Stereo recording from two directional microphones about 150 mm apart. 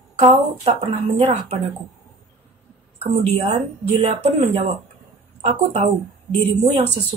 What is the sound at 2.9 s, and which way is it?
A woman's voice, 45° right (ahead or behind).